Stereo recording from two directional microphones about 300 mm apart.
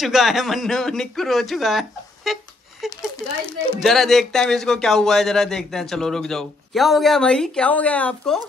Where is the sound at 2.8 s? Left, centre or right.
Centre.